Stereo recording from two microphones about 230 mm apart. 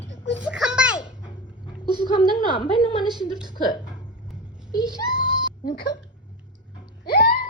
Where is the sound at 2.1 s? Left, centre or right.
Left.